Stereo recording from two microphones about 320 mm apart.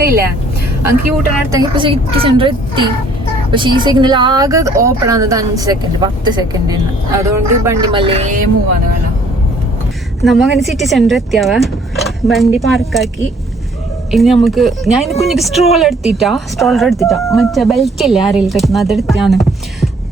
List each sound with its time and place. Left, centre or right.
0.0 s speech: right
1.5 s a woman's voice: centre
10.2 s speech: centre
14.1 s speech: centre